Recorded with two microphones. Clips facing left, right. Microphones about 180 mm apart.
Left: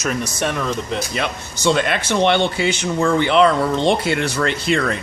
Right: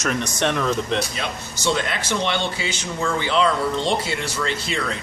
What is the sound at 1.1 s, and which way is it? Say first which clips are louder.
Speech: left 5 dB; 60° left (ahead or behind).